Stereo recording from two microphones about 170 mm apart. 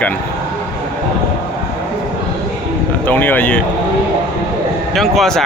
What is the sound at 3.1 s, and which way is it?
Speech, 10° left (ahead or behind).